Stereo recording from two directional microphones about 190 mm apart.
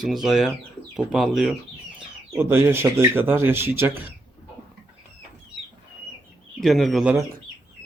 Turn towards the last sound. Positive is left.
turn(degrees=-5)  # may be behind; listen again after turning